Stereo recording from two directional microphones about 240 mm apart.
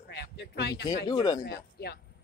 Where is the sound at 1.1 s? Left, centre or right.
Centre.